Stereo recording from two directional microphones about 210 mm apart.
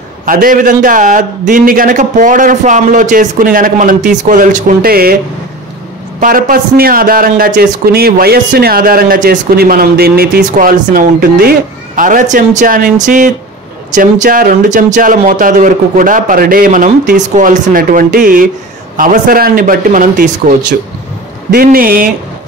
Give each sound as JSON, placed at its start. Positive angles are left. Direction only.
{"t": 0.2, "sound": "a man's voice", "side_deg": -40}
{"t": 6.1, "sound": "a man's voice", "side_deg": -40}